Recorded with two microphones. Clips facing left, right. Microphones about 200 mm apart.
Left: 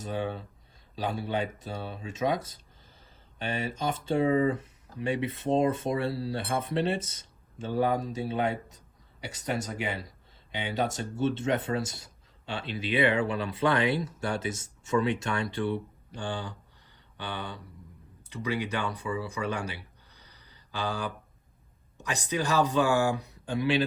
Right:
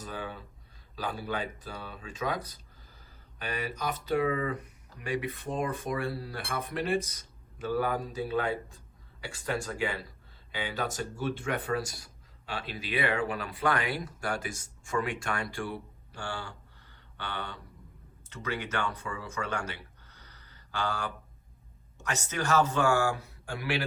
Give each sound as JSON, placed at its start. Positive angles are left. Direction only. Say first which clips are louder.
{"t": 0.0, "sound": "speech", "louder": "left 6 dB", "side_deg": 25}
{"t": 10.5, "sound": "a man's voice", "louder": "left 4 dB", "side_deg": 25}